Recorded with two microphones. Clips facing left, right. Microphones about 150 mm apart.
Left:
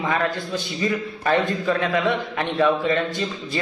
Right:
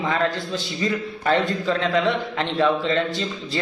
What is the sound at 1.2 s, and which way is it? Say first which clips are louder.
Speech: even; 15° left (ahead or behind).